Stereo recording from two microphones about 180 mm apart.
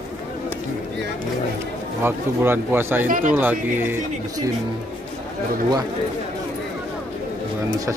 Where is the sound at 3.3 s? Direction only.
10° right (ahead or behind).